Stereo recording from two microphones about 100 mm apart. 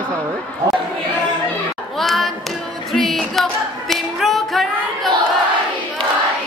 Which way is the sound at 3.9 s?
Centre (ahead or behind).